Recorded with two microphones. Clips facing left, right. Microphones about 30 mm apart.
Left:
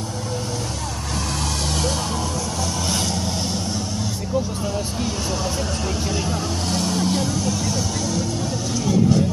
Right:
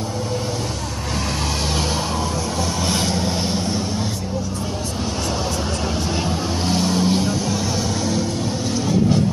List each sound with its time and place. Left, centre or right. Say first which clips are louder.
2.9 s vehicle: right 3 dB; centre
6.7 s vehicle: right 3 dB; centre